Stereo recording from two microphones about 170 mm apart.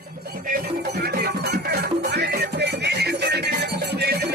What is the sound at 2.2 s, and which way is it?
Music, 75° right (ahead or behind).